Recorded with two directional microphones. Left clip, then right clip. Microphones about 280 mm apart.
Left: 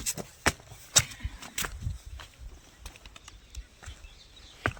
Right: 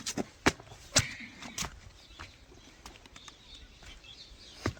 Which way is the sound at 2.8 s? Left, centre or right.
Left.